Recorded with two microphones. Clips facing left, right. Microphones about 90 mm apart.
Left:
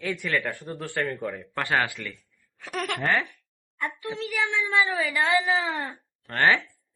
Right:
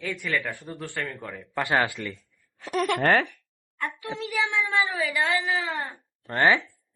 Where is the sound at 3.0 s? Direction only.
60° right (ahead or behind).